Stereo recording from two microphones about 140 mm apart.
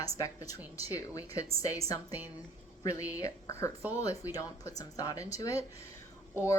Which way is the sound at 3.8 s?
10° right (ahead or behind).